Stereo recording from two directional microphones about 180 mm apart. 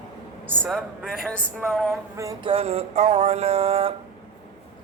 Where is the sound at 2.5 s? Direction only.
35° right (ahead or behind).